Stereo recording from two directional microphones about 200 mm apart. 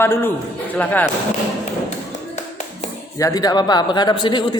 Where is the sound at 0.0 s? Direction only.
10° left (ahead or behind).